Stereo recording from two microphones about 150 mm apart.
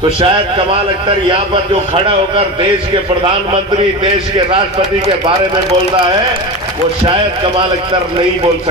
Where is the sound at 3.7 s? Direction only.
35° right (ahead or behind).